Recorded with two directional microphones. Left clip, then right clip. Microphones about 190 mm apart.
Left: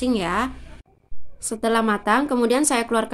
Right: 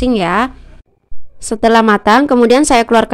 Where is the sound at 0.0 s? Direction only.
45° right (ahead or behind).